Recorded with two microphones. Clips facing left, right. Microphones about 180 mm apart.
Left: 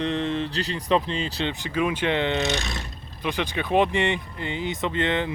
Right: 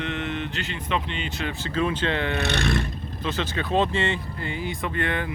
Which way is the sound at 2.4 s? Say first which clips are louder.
Right 3 dB; 60° right (ahead or behind).